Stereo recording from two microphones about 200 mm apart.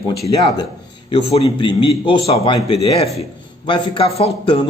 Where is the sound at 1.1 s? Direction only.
30° left (ahead or behind).